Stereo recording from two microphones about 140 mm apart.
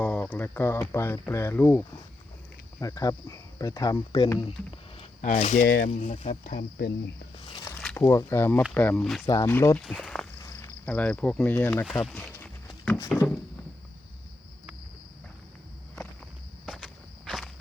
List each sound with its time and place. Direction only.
0.0 s speech: 10° left (ahead or behind)
2.8 s speech: 25° left (ahead or behind)
5.2 s speech: 60° left (ahead or behind)
6.4 s speech: 80° left
7.3 s speech: 35° left (ahead or behind)
7.9 s speech: 20° left (ahead or behind); by 9.2 s 5° left (ahead or behind)
9.3 s speech: 20° left (ahead or behind)
9.7 s speech: 5° left (ahead or behind)
10.4 s cricket: 25° left (ahead or behind)
10.8 s speech: 10° left (ahead or behind)
11.9 s speech: centre (ahead or behind)
16.6 s walk: centre (ahead or behind)